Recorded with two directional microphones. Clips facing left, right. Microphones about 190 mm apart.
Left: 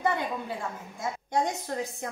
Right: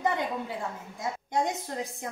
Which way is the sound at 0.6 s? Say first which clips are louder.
Even; 20° right (ahead or behind).